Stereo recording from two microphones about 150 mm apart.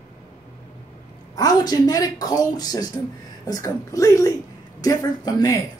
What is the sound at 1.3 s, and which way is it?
Speech, 25° left (ahead or behind).